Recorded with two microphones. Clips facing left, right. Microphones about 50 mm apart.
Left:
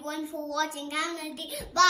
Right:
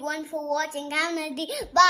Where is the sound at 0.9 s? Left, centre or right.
Right.